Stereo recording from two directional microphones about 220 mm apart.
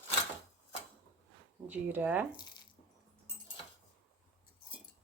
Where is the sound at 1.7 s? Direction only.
5° right (ahead or behind).